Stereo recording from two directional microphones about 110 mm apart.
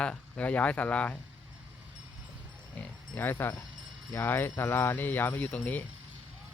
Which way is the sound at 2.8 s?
15° left (ahead or behind).